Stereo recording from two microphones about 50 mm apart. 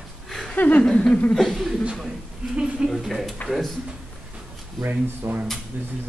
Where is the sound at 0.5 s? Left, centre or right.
Left.